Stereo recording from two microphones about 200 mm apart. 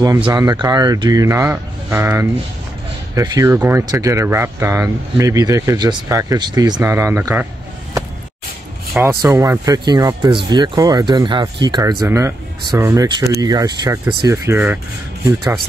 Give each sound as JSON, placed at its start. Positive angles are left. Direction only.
{"t": 0.0, "sound": "speech", "side_deg": -20}
{"t": 9.0, "sound": "speech", "side_deg": -15}